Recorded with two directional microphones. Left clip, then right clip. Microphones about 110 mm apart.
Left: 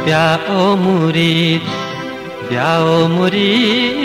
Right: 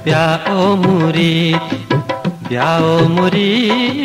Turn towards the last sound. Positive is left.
turn(degrees=-35)  # may be behind; listen again after turning